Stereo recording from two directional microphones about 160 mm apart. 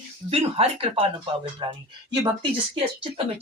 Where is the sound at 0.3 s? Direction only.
35° right (ahead or behind).